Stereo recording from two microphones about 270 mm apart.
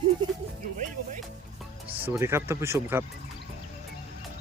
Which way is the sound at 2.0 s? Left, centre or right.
Centre.